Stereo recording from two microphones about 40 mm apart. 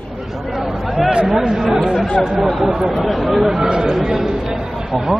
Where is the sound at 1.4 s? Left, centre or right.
Centre.